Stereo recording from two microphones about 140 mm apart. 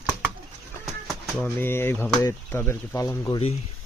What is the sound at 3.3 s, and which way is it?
Speech, 45° left (ahead or behind).